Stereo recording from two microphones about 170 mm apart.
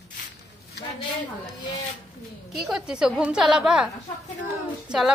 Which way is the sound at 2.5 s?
5° right (ahead or behind).